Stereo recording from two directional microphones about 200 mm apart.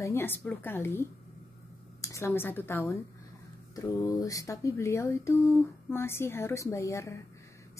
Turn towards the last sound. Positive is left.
turn(degrees=15)  # may be behind; listen again after turning